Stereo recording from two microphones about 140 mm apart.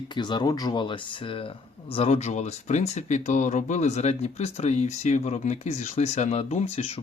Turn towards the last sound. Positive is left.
turn(degrees=50)  # may be behind; listen again after turning